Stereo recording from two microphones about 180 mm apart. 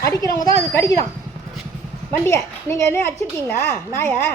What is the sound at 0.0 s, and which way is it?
Speech, 20° left (ahead or behind).